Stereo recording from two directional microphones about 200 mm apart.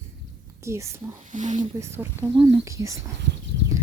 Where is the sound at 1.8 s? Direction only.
15° right (ahead or behind).